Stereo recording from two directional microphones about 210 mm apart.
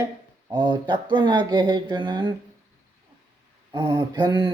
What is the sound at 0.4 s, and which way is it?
Speech, 20° right (ahead or behind).